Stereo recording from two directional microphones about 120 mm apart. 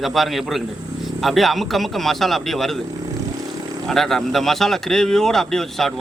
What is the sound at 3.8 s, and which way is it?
Speech, centre (ahead or behind).